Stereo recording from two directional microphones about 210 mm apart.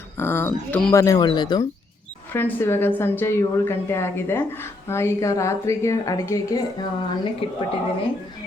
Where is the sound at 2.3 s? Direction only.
10° left (ahead or behind).